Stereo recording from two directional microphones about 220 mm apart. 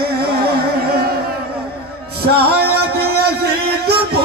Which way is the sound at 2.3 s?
45° right (ahead or behind).